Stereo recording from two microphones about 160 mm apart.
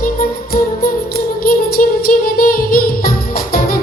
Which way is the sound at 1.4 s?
65° left (ahead or behind).